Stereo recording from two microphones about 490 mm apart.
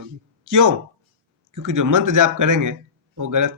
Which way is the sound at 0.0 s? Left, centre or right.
Right.